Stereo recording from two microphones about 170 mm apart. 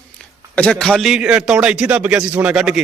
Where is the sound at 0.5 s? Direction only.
5° left (ahead or behind).